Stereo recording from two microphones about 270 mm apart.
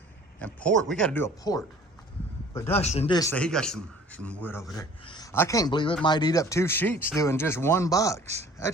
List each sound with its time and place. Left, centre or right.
0.3 s speech: centre
2.7 s a man's voice: left